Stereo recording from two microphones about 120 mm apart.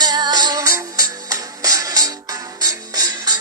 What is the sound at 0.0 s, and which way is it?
Music, 35° right (ahead or behind).